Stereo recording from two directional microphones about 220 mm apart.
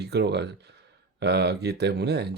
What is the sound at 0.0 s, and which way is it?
Speech, 50° right (ahead or behind).